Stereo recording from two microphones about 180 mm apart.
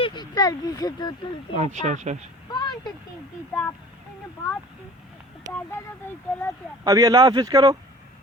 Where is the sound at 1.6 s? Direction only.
40° right (ahead or behind).